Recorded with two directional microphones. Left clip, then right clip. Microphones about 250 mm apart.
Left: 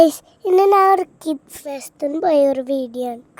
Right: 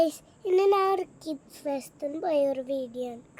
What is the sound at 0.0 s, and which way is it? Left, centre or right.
A child's voice, left.